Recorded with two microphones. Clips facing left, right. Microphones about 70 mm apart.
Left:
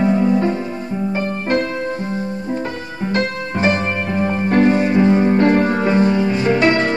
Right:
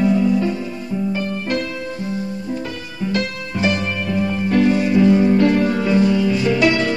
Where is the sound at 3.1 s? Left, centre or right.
Left.